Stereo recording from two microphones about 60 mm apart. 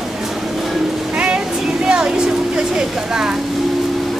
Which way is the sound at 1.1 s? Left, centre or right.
Centre.